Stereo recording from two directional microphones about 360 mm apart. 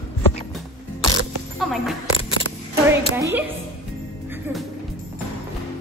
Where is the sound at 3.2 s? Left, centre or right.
Centre.